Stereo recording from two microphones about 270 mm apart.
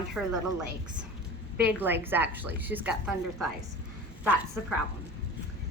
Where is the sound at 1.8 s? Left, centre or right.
Centre.